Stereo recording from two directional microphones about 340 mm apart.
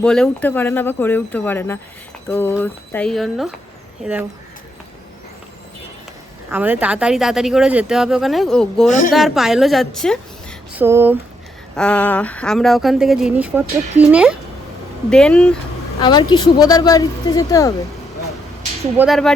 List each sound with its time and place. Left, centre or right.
0.0 s speech: centre
6.5 s speech: centre
8.9 s speech: left
9.1 s a woman's voice: centre
18.9 s speech: centre